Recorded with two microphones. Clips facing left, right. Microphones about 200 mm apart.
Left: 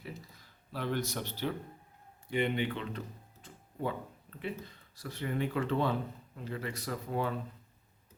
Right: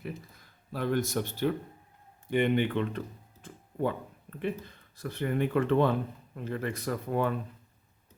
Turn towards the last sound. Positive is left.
turn(degrees=-55)  # may be behind; listen again after turning